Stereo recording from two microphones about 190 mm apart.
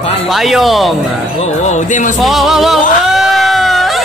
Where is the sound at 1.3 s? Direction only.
35° left (ahead or behind).